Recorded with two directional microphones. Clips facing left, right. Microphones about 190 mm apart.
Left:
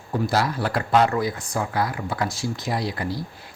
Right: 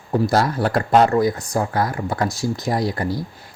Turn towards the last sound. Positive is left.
turn(degrees=-45)  # may be behind; listen again after turning